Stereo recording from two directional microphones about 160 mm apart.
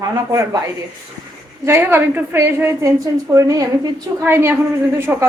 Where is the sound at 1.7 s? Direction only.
15° right (ahead or behind).